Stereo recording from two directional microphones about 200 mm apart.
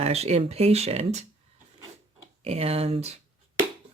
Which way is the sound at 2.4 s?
30° right (ahead or behind).